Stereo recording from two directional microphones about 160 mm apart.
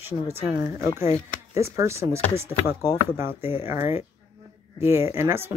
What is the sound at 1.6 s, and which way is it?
Speech, 15° right (ahead or behind).